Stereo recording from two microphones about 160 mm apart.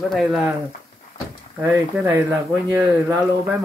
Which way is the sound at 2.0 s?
10° right (ahead or behind).